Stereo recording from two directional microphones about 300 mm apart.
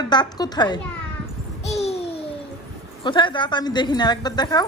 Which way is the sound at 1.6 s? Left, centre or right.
Left.